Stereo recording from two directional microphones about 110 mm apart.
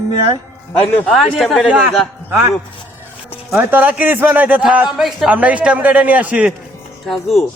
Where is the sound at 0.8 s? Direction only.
20° left (ahead or behind).